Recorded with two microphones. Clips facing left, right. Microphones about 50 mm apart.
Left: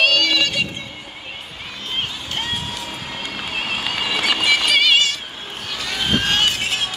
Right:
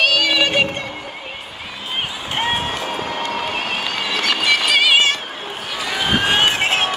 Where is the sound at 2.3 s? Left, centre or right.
Right.